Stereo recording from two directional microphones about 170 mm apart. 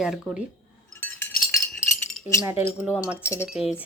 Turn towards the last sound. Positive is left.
turn(degrees=-5)  # may be behind; listen again after turning